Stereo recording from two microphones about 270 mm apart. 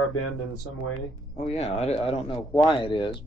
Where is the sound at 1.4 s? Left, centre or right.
Left.